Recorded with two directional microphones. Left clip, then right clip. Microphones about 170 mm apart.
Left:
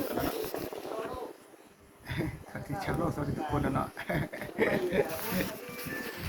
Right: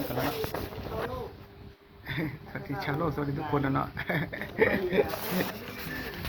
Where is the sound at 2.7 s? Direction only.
20° right (ahead or behind).